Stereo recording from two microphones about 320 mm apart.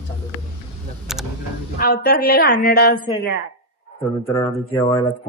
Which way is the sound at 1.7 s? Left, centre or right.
Left.